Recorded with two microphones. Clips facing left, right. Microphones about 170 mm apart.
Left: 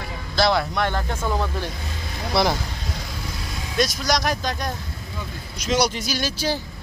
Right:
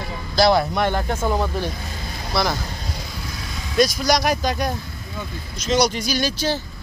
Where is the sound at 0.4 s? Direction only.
35° right (ahead or behind).